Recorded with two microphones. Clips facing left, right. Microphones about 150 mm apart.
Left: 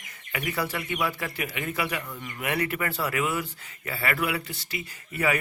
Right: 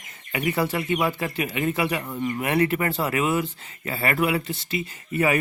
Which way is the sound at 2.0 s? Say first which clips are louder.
Right 11 dB; 45° right (ahead or behind).